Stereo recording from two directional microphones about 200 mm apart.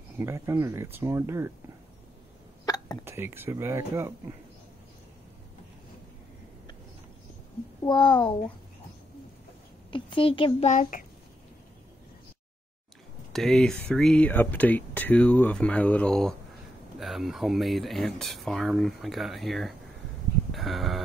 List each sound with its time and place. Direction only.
0.2 s speech: 15° right (ahead or behind)
2.6 s hiccup: 20° left (ahead or behind)
3.1 s speech: 10° right (ahead or behind)
7.8 s a child's voice: 25° left (ahead or behind)
9.8 s a child's voice: 25° left (ahead or behind)
10.7 s a child's voice: 40° left (ahead or behind)
13.3 s speech: centre (ahead or behind)
20.5 s a sound: centre (ahead or behind)